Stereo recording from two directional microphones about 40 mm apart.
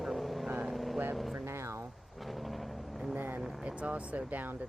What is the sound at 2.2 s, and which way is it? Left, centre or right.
Vehicle, centre.